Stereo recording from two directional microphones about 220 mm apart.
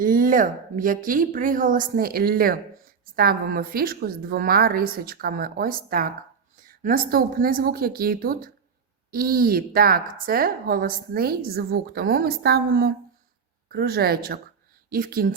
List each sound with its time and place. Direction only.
0.0 s a woman's voice: 40° right (ahead or behind)